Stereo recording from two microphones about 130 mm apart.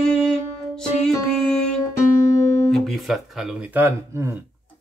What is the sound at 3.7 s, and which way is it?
Speech, 15° right (ahead or behind).